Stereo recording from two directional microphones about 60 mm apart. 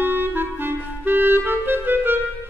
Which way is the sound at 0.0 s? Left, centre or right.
Right.